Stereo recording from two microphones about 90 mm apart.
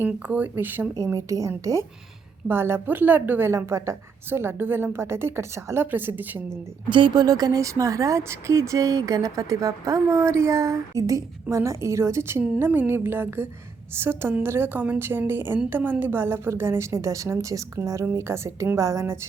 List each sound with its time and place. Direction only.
0.0 s a woman's voice: 20° right (ahead or behind)
0.9 s speech: 40° right (ahead or behind)
2.5 s a woman's voice: 25° right (ahead or behind)
6.9 s a woman's voice: 60° right (ahead or behind); by 19.2 s 30° right (ahead or behind)